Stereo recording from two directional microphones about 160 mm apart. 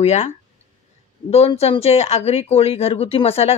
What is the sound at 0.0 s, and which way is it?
Speech, 40° left (ahead or behind).